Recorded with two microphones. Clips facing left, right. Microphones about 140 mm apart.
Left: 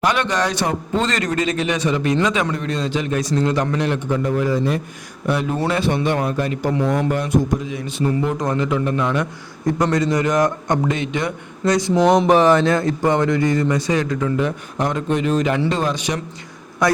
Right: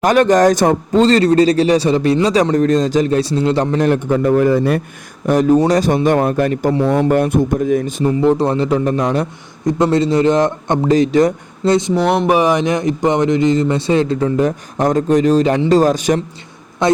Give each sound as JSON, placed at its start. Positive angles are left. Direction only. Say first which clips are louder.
{"t": 0.0, "sound": "a man's voice", "louder": "right 9 dB", "side_deg": -45}
{"t": 5.2, "sound": "a man's voice", "louder": "right 9 dB", "side_deg": -40}
{"t": 6.7, "sound": "a man's voice", "louder": "right 3 dB", "side_deg": -30}
{"t": 7.1, "sound": "a man's voice", "louder": "right 5 dB", "side_deg": -55}
{"t": 8.2, "sound": "a man's voice", "louder": "right 7 dB", "side_deg": -30}
{"t": 9.6, "sound": "speech", "louder": "right 4 dB", "side_deg": -25}
{"t": 10.9, "sound": "a man's voice", "louder": "right 11 dB", "side_deg": -35}
{"t": 11.6, "sound": "speech", "louder": "right 4 dB", "side_deg": -25}
{"t": 12.0, "sound": "a man's voice", "louder": "left 3 dB", "side_deg": -5}
{"t": 16.8, "sound": "speech", "louder": "right 4 dB", "side_deg": -25}